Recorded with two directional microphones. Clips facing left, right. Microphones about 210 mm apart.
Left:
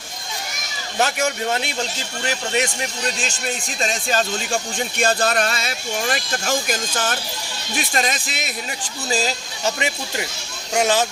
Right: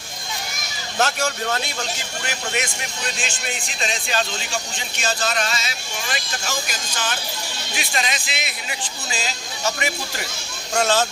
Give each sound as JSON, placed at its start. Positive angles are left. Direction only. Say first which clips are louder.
{"t": 0.9, "sound": "speech", "louder": "left 2 dB", "side_deg": 15}
{"t": 2.2, "sound": "speech", "louder": "left 5 dB", "side_deg": 30}
{"t": 3.8, "sound": "speech", "louder": "left 3 dB", "side_deg": 45}
{"t": 10.8, "sound": "speech", "louder": "left 1 dB", "side_deg": 15}